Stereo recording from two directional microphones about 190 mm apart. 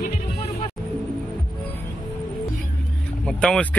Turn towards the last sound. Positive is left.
turn(degrees=5)  # may be behind; listen again after turning